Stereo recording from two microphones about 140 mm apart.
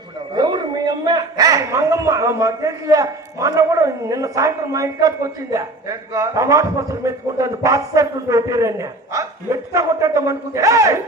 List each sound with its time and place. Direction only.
0.3 s a man's voice: 30° right (ahead or behind)